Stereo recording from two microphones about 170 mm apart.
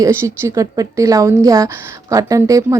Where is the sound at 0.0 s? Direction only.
15° right (ahead or behind).